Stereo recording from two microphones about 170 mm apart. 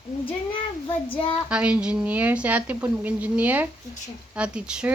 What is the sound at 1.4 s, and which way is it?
A woman's voice, 5° right (ahead or behind).